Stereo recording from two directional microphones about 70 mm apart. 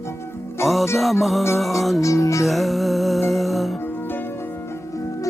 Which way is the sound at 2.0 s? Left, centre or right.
Left.